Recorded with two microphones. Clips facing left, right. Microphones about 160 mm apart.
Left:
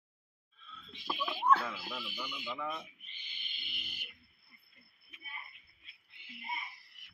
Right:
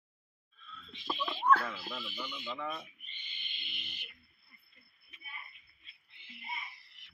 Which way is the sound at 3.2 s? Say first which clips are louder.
Right 1 dB; 5° left (ahead or behind).